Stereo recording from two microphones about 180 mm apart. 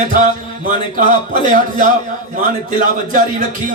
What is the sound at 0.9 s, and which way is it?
Speech, 50° right (ahead or behind).